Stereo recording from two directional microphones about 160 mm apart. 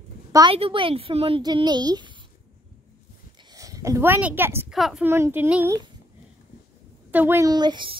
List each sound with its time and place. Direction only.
0.3 s a woman's voice: 25° right (ahead or behind)
3.5 s speech: 20° right (ahead or behind)
4.6 s speech: centre (ahead or behind)
5.0 s a child's voice: 15° right (ahead or behind)
7.1 s a child's voice: 10° right (ahead or behind)
7.5 s speech: 30° right (ahead or behind)